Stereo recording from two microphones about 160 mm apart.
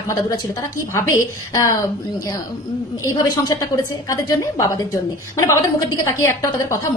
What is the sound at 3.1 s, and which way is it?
A woman's voice, 25° left (ahead or behind).